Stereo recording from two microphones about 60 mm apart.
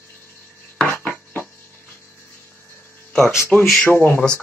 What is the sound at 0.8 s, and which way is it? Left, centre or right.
Dishes, left.